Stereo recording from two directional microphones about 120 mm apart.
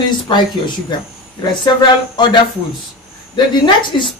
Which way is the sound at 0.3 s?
45° left (ahead or behind).